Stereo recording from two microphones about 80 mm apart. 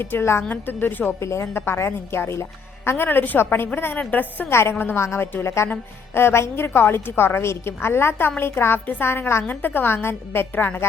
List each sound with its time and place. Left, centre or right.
0.0 s a woman's voice: left
1.2 s a woman's voice: left